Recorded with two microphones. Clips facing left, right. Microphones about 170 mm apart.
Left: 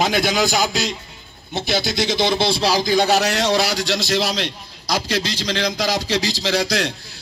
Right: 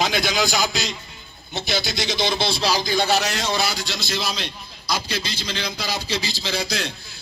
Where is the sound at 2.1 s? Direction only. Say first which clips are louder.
Left 4 dB; 75° left (ahead or behind).